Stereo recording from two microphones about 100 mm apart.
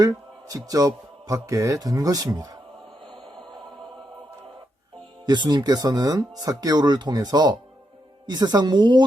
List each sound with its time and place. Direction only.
0.0 s a man's voice: 35° right (ahead or behind)
5.2 s speech: 45° right (ahead or behind)